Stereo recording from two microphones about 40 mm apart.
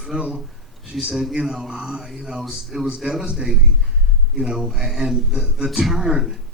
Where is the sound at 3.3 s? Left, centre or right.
Right.